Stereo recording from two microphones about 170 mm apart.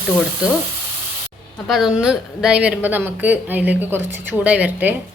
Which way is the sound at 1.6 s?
Centre (ahead or behind).